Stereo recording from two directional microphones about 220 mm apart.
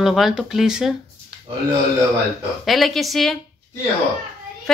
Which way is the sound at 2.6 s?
Centre (ahead or behind).